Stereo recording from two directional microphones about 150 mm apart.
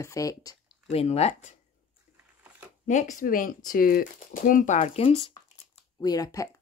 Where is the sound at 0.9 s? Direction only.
45° left (ahead or behind).